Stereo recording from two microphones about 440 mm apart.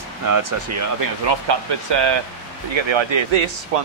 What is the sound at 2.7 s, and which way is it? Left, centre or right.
Speech, right.